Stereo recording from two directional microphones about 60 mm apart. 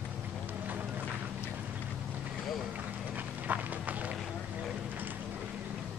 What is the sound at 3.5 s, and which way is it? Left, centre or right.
Run, right.